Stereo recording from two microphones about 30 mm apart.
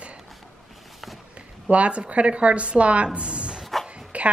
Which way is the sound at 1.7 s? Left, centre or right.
Right.